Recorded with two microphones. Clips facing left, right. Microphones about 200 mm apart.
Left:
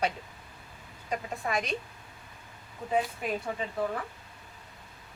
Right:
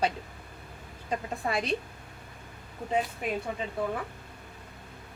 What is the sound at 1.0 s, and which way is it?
Speech, 30° right (ahead or behind).